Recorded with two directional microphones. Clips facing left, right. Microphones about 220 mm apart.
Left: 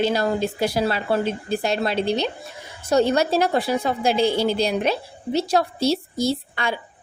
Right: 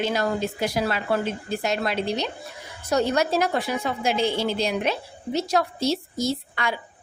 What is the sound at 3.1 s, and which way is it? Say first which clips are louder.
A woman's voice: left 3 dB; 30° left (ahead or behind).